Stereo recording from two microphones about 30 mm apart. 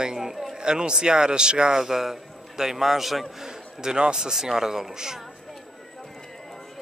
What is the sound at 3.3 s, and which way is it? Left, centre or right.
A man's voice, right.